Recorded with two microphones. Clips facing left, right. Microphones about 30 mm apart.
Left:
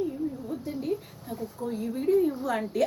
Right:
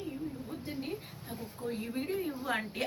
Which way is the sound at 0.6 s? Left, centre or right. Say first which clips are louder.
Left 8 dB; right.